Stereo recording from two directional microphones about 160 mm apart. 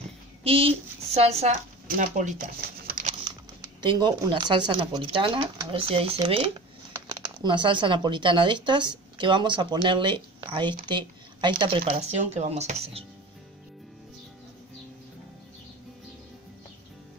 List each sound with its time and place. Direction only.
0.4 s speech: 35° right (ahead or behind); by 2.4 s 55° right (ahead or behind)
2.9 s crumpling: 55° right (ahead or behind)
3.8 s speech: 25° right (ahead or behind)
12.0 s speech: 45° right (ahead or behind)